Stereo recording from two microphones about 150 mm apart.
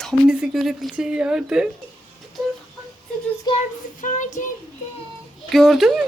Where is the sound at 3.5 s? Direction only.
30° left (ahead or behind).